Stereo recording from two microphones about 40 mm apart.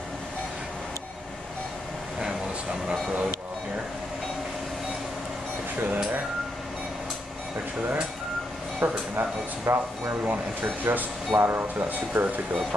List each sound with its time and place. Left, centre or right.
2.1 s a sound: centre
8.7 s speech: right
10.2 s speech: right